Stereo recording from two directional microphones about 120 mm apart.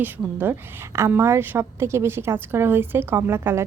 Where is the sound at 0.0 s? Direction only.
15° right (ahead or behind).